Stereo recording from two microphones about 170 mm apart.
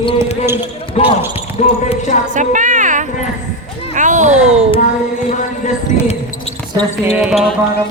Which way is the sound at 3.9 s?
45° right (ahead or behind).